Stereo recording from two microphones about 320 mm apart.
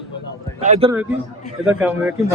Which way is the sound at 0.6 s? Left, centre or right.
Right.